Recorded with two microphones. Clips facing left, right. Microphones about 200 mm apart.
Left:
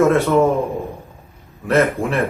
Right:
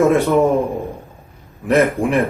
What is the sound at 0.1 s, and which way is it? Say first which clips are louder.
Speech: right 1 dB; 15° right (ahead or behind).